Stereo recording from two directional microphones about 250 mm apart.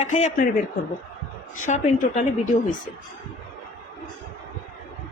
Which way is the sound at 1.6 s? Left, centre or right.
Left.